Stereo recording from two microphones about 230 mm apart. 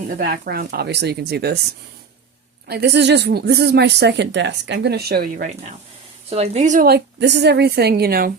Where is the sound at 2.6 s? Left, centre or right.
Right.